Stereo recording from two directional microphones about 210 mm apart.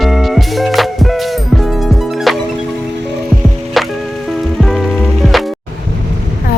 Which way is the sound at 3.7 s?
Centre (ahead or behind).